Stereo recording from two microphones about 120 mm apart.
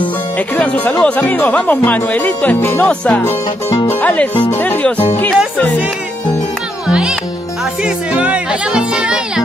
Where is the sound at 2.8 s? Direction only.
10° left (ahead or behind).